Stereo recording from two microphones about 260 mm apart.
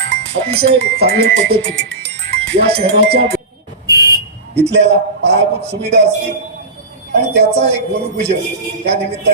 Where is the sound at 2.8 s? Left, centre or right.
Right.